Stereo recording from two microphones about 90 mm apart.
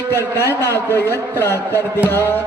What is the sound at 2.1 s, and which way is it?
Speech, 30° left (ahead or behind).